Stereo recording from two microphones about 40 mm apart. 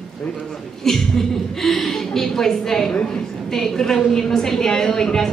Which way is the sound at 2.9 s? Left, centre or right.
Left.